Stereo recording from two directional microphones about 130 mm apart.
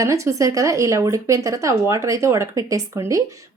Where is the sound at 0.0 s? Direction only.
25° right (ahead or behind).